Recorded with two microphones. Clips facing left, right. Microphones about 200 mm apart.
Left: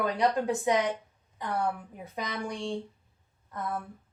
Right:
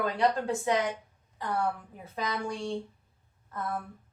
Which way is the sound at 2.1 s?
15° left (ahead or behind).